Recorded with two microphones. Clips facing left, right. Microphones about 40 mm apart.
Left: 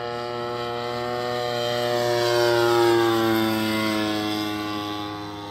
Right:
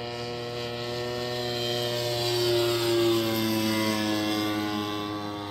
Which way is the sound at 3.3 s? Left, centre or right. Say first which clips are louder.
Left 4 dB; left.